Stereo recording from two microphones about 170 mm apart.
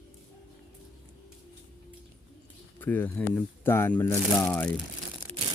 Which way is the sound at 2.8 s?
10° left (ahead or behind).